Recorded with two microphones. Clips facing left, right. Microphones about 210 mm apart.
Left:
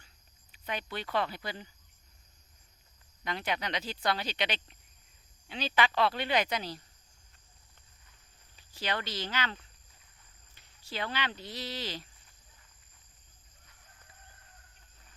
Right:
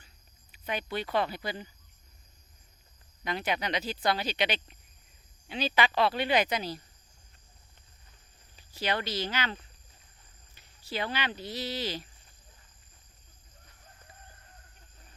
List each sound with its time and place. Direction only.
0.5 s speech: 10° right (ahead or behind)
3.2 s speech: 10° right (ahead or behind)
8.7 s speech: 10° right (ahead or behind)